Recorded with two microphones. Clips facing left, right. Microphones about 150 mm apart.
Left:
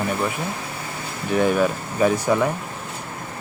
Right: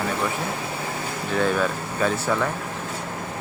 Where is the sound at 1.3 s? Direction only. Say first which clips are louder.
Left 4 dB; 15° left (ahead or behind).